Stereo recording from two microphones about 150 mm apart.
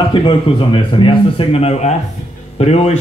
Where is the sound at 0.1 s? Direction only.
35° left (ahead or behind).